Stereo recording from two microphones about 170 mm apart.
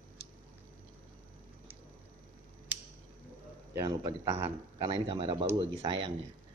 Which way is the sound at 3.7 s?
25° right (ahead or behind).